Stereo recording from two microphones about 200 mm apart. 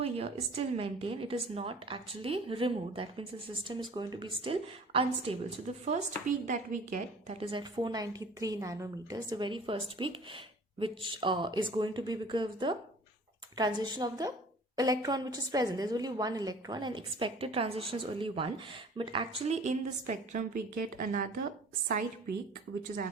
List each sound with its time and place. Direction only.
0.0 s a woman's voice: 30° right (ahead or behind)
7.3 s a woman's voice: 25° right (ahead or behind); by 21.2 s 45° right (ahead or behind)